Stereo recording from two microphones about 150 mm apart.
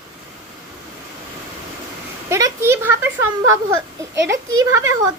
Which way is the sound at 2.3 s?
20° right (ahead or behind).